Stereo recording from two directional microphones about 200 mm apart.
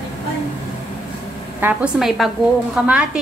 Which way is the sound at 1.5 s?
10° right (ahead or behind).